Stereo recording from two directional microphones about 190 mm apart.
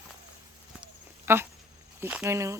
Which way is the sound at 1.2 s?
10° right (ahead or behind).